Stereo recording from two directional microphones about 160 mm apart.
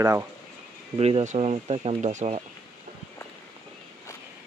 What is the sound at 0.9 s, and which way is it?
Speech, 40° right (ahead or behind).